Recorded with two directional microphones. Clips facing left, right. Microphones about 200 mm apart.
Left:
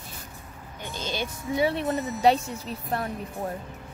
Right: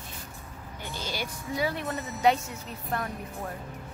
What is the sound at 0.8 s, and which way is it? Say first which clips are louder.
Speech: left 3 dB; 20° left (ahead or behind).